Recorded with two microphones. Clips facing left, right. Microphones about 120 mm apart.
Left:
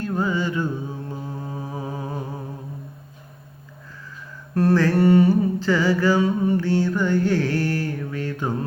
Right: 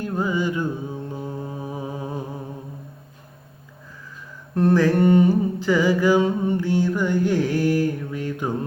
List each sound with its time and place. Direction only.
0.0 s music: 15° right (ahead or behind)
1.6 s humming: 15° right (ahead or behind)
4.5 s mantra: 20° right (ahead or behind)